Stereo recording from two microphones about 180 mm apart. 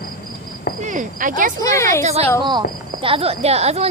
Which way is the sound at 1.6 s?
15° left (ahead or behind).